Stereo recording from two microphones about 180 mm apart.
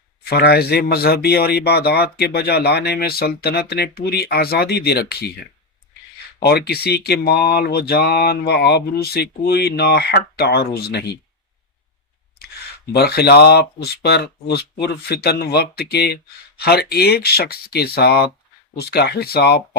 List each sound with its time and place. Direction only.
0.3 s speech: 65° left (ahead or behind)
6.4 s speech: 60° left (ahead or behind)
12.9 s speech: 60° left (ahead or behind)